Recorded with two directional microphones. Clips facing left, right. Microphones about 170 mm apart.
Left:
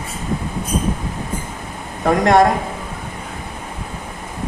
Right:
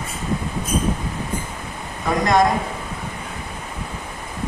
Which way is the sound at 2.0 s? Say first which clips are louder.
Left 4 dB; 65° left (ahead or behind).